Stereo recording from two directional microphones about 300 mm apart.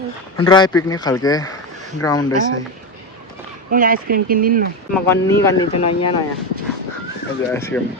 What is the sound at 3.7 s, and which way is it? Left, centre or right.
Speech, right.